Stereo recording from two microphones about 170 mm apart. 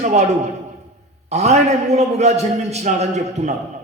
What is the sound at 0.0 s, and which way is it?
Speech, 45° right (ahead or behind).